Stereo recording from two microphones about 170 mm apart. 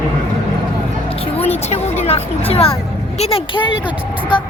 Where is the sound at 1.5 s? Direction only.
40° left (ahead or behind).